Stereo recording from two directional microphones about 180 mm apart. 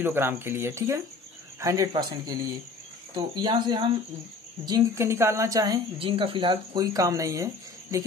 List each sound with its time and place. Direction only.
0.0 s a woman's voice: 10° right (ahead or behind)